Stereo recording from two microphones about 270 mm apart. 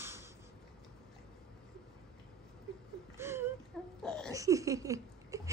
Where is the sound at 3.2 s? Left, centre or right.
Centre.